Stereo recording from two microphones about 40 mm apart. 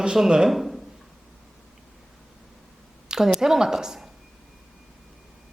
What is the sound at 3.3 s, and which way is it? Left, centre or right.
Speech, centre.